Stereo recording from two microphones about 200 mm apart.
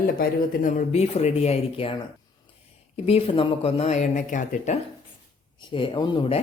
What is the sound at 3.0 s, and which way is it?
Speech, 30° left (ahead or behind).